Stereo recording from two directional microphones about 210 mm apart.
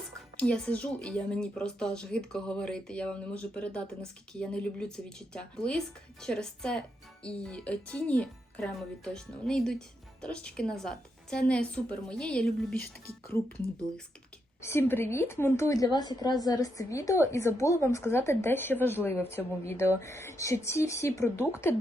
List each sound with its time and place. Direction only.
0.3 s speech: 5° left (ahead or behind)
14.6 s a woman's voice: 10° left (ahead or behind)